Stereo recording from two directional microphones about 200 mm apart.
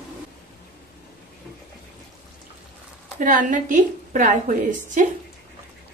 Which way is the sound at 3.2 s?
40° right (ahead or behind).